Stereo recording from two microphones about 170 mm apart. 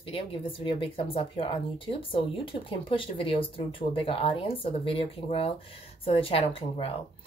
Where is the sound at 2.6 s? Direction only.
30° left (ahead or behind).